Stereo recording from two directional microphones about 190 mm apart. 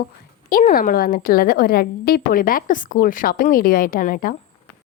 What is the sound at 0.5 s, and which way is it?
Speech, 45° left (ahead or behind).